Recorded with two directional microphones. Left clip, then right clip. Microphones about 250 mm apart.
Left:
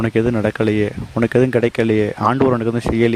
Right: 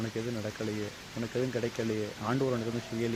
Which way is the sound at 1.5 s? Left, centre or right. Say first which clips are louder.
Left 17 dB; left.